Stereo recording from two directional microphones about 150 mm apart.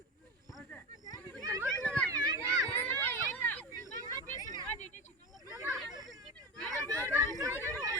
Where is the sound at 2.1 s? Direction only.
25° right (ahead or behind).